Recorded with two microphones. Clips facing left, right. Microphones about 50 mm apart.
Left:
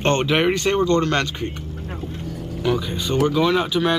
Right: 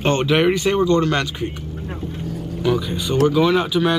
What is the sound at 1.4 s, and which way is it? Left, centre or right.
Vehicle, centre.